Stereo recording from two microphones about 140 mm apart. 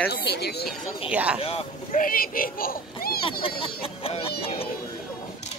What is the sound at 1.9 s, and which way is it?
Speech, 85° left.